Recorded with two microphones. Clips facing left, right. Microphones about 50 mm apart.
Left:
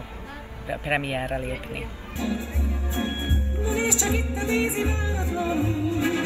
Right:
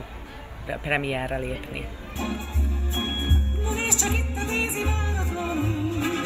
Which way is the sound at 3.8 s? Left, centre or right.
Right.